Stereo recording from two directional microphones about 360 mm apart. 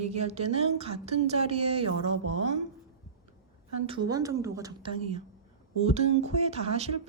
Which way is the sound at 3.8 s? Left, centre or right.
Centre.